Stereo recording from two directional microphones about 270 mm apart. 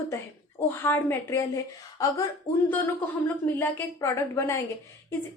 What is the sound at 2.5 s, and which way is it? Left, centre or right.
Speech, left.